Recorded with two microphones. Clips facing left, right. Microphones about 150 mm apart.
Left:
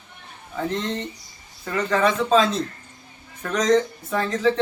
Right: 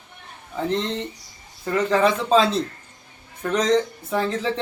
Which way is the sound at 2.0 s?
30° right (ahead or behind).